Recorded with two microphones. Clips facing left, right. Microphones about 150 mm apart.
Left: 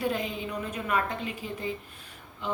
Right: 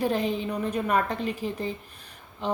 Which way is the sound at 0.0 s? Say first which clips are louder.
Right 4 dB; 35° right (ahead or behind).